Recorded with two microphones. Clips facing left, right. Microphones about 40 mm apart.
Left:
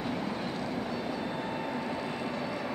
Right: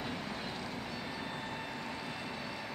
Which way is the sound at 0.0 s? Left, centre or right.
Centre.